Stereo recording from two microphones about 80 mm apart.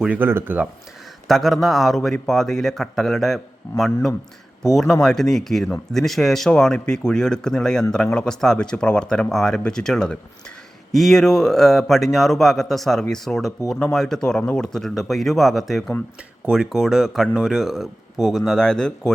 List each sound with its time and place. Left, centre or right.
0.2 s speech: right
1.3 s speech: centre